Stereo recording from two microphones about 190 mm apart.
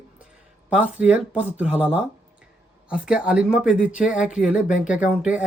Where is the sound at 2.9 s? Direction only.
5° right (ahead or behind).